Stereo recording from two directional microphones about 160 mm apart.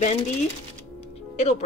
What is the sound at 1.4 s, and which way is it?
Speech, 45° left (ahead or behind).